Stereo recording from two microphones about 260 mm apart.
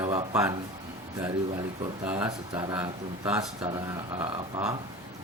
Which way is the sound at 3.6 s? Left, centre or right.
Centre.